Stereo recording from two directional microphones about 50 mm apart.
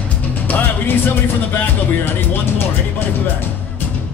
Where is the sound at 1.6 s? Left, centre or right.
Left.